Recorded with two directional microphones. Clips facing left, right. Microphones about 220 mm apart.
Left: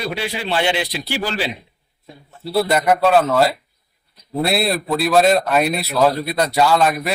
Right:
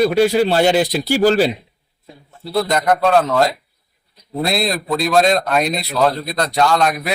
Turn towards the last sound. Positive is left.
turn(degrees=5)  # may be behind; listen again after turning